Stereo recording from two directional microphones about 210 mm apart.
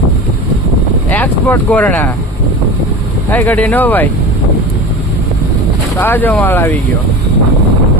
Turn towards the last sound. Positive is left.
turn(degrees=10)  # may be behind; listen again after turning